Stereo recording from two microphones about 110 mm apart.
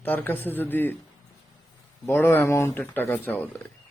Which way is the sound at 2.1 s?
20° left (ahead or behind).